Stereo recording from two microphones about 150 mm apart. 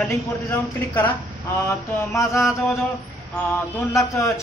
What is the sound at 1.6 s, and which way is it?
Mantra, 20° left (ahead or behind).